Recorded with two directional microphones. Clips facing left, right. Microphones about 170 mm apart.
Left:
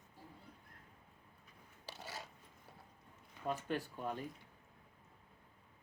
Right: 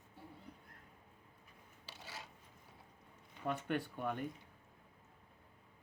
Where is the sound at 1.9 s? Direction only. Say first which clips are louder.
Left 4 dB; 40° left (ahead or behind).